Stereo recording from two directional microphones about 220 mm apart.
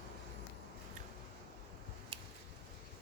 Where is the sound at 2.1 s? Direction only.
25° right (ahead or behind).